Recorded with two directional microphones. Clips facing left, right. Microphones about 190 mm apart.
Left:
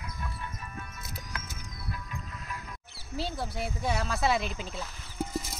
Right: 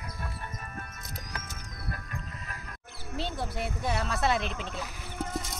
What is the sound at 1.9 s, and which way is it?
Music, 55° right (ahead or behind).